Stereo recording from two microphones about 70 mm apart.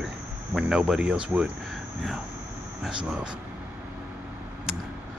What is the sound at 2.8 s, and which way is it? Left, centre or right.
Speech, centre.